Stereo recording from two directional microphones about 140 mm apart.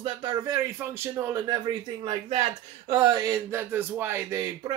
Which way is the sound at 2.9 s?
30° right (ahead or behind).